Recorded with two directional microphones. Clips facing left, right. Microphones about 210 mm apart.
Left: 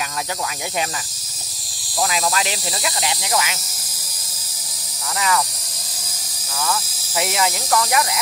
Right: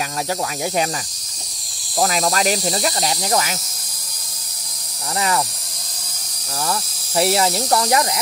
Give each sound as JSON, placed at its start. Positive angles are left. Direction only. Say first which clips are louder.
{"t": 2.0, "sound": "speech", "louder": "right 3 dB", "side_deg": -40}
{"t": 6.6, "sound": "speech", "louder": "even", "side_deg": -35}